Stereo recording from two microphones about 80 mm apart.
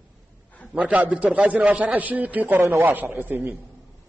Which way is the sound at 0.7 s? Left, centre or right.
Centre.